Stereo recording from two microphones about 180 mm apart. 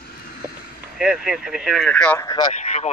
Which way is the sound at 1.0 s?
5° right (ahead or behind).